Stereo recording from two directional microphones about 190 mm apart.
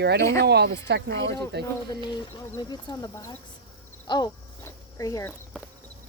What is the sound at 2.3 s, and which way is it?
Speech, 20° left (ahead or behind).